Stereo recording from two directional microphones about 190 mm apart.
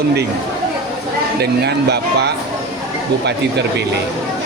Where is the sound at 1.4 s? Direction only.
60° right (ahead or behind).